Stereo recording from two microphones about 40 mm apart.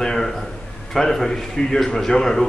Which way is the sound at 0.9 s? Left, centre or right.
Centre.